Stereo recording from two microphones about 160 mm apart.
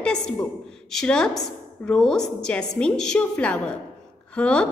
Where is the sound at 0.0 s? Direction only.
5° left (ahead or behind).